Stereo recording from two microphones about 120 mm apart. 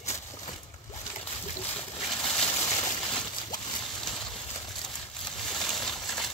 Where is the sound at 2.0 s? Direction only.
5° left (ahead or behind).